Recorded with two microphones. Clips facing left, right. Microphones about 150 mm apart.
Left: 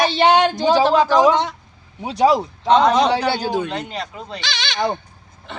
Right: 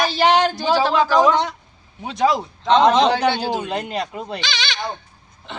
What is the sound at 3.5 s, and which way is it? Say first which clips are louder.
Speech: left 1 dB; 15° right (ahead or behind).